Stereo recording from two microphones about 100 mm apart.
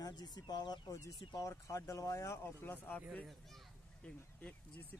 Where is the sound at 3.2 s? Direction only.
Centre (ahead or behind).